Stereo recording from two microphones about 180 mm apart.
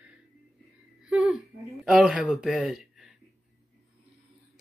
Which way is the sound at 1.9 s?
5° right (ahead or behind).